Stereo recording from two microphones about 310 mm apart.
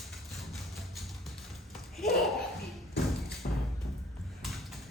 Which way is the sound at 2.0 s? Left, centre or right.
Centre.